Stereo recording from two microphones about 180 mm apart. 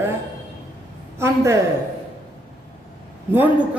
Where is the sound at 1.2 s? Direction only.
15° right (ahead or behind).